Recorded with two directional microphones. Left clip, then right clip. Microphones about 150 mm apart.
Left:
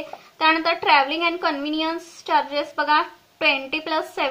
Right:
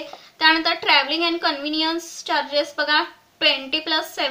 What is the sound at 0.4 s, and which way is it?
A woman's voice, 35° left (ahead or behind).